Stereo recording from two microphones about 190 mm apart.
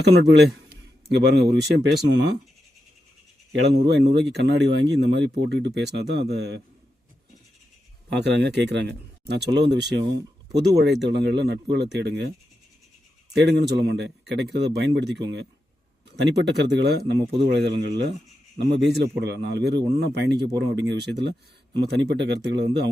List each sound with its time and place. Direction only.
0.1 s speech: 60° right (ahead or behind)
3.7 s speech: 65° right (ahead or behind)
8.1 s speech: 65° right (ahead or behind)
13.3 s speech: 65° right (ahead or behind)